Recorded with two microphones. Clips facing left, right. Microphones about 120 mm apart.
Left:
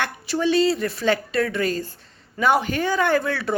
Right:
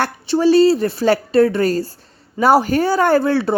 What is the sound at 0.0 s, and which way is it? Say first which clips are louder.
A woman's voice: right 7 dB; 35° right (ahead or behind).